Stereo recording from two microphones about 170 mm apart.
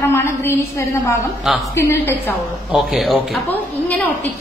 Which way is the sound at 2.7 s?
Centre (ahead or behind).